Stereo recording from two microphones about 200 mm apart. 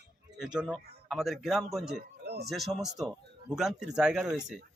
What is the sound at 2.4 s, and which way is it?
Speech, centre (ahead or behind).